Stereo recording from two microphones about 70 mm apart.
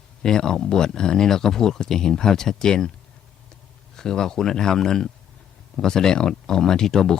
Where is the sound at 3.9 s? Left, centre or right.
Centre.